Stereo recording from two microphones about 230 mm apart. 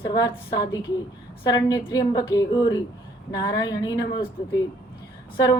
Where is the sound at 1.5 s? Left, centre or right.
Centre.